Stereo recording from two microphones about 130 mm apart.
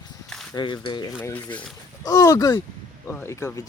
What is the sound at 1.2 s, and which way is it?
Speech, 10° left (ahead or behind).